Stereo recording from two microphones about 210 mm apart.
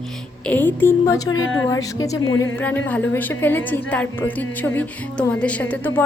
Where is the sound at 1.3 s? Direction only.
70° left (ahead or behind).